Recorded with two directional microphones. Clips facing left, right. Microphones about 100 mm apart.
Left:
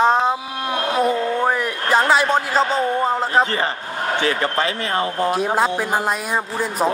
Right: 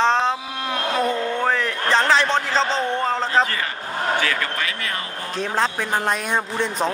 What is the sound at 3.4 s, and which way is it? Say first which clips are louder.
A man's voice: left 3 dB; 30° left (ahead or behind).